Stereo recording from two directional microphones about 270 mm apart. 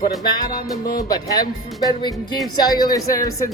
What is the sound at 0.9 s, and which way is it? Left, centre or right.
Speech, centre.